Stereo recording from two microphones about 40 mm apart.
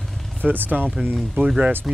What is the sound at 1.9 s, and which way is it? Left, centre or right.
Speech, centre.